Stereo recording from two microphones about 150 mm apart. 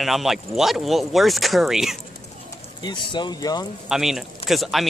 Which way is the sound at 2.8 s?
30° left (ahead or behind).